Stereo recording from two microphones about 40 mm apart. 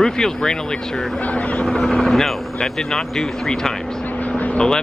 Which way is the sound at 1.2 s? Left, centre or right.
Left.